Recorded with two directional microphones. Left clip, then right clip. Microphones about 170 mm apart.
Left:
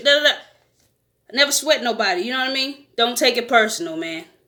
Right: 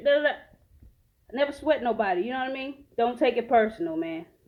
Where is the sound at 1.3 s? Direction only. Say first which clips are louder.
Left 8 dB; 35° left (ahead or behind).